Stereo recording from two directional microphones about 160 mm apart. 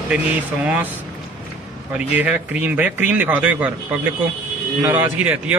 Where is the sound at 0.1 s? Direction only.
5° right (ahead or behind).